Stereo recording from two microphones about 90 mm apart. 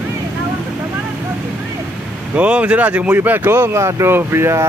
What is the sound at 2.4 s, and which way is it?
Speech, 15° right (ahead or behind).